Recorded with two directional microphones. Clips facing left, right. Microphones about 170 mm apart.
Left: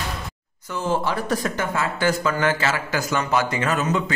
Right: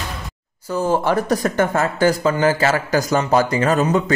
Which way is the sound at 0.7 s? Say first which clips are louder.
Right 5 dB; 40° right (ahead or behind).